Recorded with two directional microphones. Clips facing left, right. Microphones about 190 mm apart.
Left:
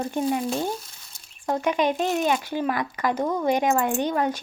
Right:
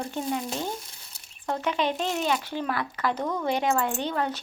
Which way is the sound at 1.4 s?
15° left (ahead or behind).